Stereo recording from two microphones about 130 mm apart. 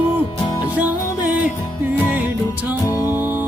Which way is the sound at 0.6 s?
10° right (ahead or behind).